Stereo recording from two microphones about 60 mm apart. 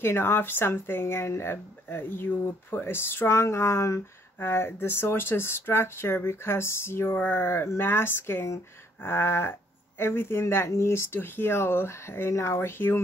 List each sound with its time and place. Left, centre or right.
0.0 s speech: left
4.4 s speech: left